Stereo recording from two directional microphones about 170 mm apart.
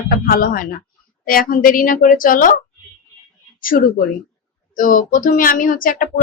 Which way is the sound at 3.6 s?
55° left (ahead or behind).